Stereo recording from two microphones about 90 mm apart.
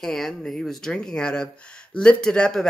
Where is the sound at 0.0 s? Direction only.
5° left (ahead or behind).